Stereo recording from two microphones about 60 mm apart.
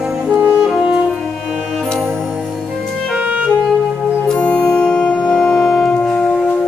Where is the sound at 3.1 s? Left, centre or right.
Right.